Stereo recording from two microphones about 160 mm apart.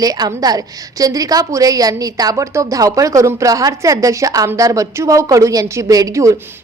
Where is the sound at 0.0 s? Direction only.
25° right (ahead or behind).